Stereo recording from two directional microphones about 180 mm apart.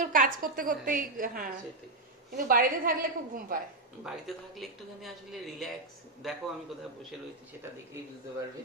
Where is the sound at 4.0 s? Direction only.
Centre (ahead or behind).